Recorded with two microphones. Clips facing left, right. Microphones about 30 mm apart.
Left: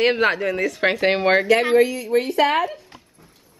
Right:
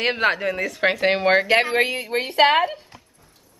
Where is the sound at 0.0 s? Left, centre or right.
Centre.